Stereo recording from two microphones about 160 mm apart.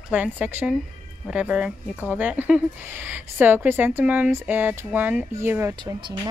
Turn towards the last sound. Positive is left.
turn(degrees=-25)  # may be behind; listen again after turning